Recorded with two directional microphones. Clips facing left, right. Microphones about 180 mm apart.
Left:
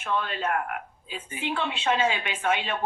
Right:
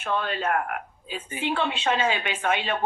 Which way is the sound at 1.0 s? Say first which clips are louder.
Right 4 dB; 30° right (ahead or behind).